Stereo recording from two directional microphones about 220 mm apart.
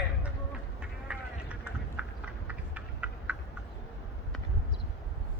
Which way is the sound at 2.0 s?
5° right (ahead or behind).